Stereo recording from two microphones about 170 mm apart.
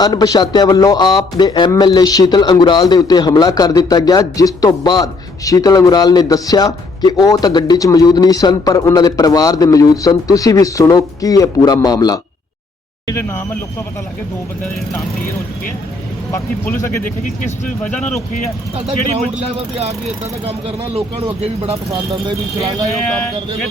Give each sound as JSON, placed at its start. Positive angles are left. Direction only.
{"t": 0.0, "sound": "a man's voice", "side_deg": 25}
{"t": 16.3, "sound": "speech", "side_deg": 15}
{"t": 20.4, "sound": "speech", "side_deg": -35}